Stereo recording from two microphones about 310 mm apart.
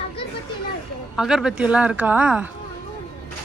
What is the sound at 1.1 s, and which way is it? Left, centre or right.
Speech, centre.